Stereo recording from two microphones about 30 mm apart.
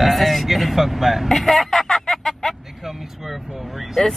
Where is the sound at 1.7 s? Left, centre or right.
Centre.